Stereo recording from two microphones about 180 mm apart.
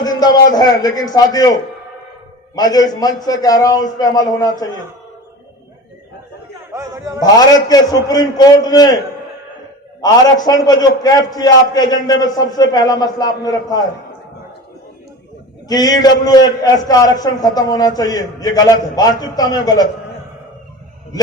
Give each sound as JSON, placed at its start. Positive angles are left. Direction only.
{"t": 0.0, "sound": "a man's voice", "side_deg": 20}
{"t": 2.6, "sound": "a man's voice", "side_deg": 20}
{"t": 6.7, "sound": "speech", "side_deg": -15}
{"t": 7.3, "sound": "a man's voice", "side_deg": 20}
{"t": 10.0, "sound": "a man's voice", "side_deg": 20}
{"t": 15.7, "sound": "a man's voice", "side_deg": 20}